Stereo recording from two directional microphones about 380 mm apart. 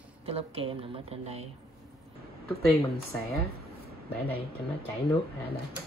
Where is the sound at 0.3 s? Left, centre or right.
Centre.